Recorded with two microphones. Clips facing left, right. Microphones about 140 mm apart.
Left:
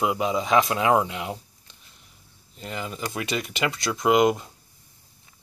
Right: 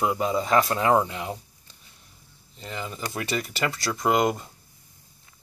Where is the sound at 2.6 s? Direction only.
10° left (ahead or behind).